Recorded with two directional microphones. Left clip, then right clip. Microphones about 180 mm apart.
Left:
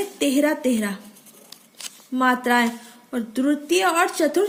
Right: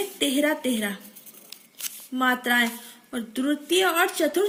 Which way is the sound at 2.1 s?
60° left (ahead or behind).